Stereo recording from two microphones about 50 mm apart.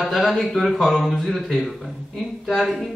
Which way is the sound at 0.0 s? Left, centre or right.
Centre.